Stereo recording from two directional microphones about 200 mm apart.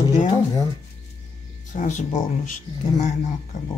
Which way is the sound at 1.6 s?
40° left (ahead or behind).